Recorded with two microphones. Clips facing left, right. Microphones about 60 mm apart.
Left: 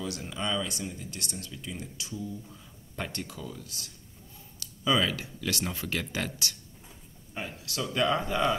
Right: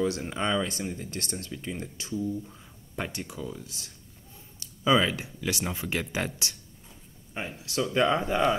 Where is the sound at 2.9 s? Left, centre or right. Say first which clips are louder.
Right 2 dB; centre.